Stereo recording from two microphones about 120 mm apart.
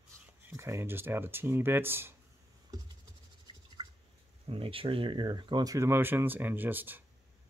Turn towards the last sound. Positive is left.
turn(degrees=-15)  # may be behind; listen again after turning